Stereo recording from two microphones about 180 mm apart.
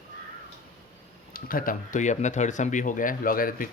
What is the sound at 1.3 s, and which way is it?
Speech, 50° left (ahead or behind).